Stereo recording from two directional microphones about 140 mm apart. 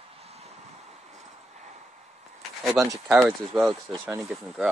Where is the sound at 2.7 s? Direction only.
25° right (ahead or behind).